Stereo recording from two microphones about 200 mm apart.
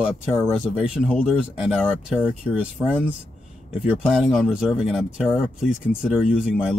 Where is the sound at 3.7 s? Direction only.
Centre (ahead or behind).